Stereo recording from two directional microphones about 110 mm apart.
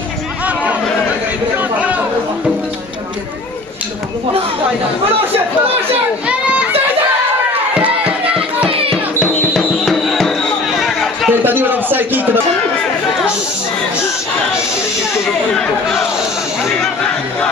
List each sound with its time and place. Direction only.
1.6 s chatter: 15° right (ahead or behind)
6.2 s child singing: 10° right (ahead or behind)
7.7 s music: 10° right (ahead or behind)
8.6 s music: 55° right (ahead or behind)
9.2 s music: 15° left (ahead or behind)
9.5 s music: centre (ahead or behind)
10.8 s chatter: centre (ahead or behind)
11.2 s a sound: 15° right (ahead or behind)
15.5 s chatter: 5° left (ahead or behind)